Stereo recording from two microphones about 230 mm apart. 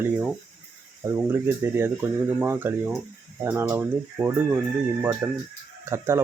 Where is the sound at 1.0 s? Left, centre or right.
Centre.